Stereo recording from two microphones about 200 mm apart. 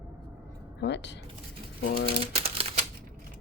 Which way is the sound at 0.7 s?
60° left (ahead or behind).